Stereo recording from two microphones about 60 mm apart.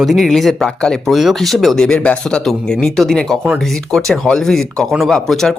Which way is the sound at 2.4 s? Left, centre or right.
Centre.